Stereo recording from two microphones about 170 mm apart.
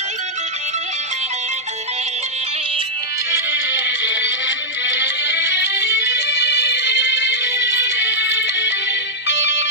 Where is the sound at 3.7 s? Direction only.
90° left.